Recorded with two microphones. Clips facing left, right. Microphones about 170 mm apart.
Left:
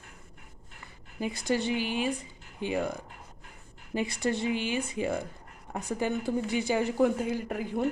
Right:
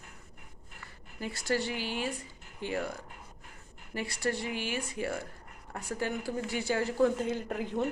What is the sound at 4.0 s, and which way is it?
Speech, 20° left (ahead or behind).